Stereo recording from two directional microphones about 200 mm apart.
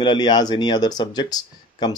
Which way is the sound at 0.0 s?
25° left (ahead or behind).